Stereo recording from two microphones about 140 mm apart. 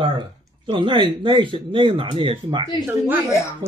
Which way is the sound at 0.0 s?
35° right (ahead or behind).